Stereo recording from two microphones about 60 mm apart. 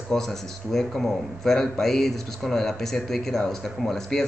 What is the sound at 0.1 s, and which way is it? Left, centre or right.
Speech, centre.